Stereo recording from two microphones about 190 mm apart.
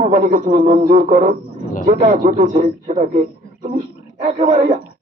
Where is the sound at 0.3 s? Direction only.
45° right (ahead or behind).